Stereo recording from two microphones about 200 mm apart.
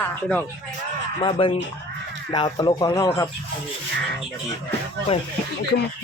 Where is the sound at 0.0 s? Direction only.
10° left (ahead or behind).